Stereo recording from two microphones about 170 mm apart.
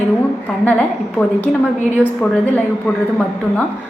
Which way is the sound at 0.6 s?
10° left (ahead or behind).